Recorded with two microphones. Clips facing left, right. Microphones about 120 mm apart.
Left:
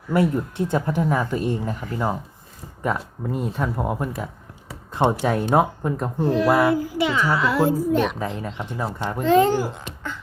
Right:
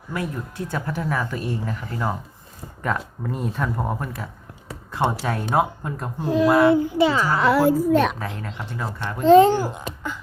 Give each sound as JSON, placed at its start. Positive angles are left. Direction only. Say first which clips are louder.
{"t": 0.2, "sound": "speech", "louder": "left 8 dB", "side_deg": 25}
{"t": 5.2, "sound": "speech", "louder": "left 3 dB", "side_deg": 15}
{"t": 6.2, "sound": "speech", "louder": "right 2 dB", "side_deg": -15}
{"t": 7.3, "sound": "a woman's voice", "louder": "right 4 dB", "side_deg": -60}
{"t": 8.2, "sound": "speech", "louder": "left 3 dB", "side_deg": 15}
{"t": 9.2, "sound": "speech", "louder": "right 4 dB", "side_deg": -25}